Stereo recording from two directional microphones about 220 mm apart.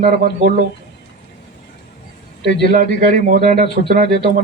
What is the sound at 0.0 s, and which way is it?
Speech, 35° right (ahead or behind).